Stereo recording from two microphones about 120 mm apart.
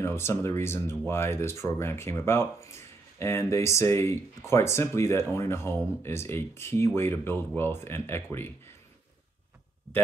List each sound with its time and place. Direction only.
0.0 s speech: 20° left (ahead or behind)